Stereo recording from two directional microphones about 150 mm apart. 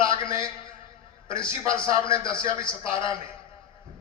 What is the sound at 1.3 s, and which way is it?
Speech, 35° left (ahead or behind).